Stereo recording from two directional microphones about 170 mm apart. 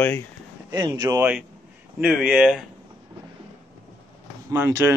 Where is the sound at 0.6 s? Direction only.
25° right (ahead or behind).